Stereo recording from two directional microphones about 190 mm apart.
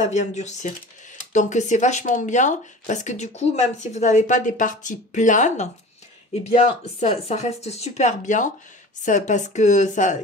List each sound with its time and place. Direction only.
0.0 s speech: 40° left (ahead or behind)
7.0 s speech: 35° left (ahead or behind)